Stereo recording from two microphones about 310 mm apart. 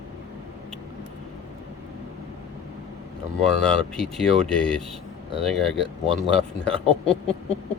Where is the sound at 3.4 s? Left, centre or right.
Centre.